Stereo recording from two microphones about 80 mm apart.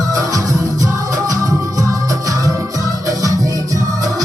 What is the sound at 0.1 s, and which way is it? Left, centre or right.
Music, right.